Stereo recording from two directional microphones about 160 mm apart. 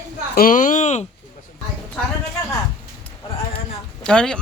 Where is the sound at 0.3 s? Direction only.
60° left (ahead or behind).